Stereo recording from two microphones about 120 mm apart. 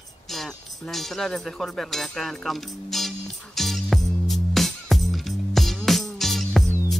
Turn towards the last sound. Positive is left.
turn(degrees=0)  # may be behind; listen again after turning